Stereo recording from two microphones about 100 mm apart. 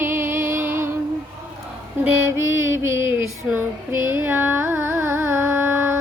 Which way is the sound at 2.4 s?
25° right (ahead or behind).